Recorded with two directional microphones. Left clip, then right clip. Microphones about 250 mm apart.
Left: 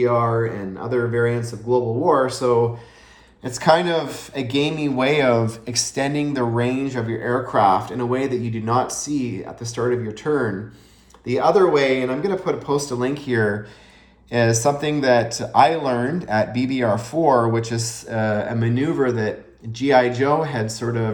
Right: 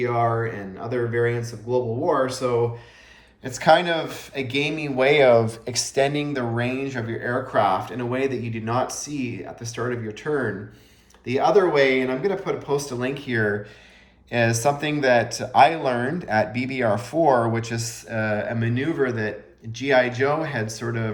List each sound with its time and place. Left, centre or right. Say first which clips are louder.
0.0 s speech: left 4 dB; centre
3.4 s speech: left 1 dB; centre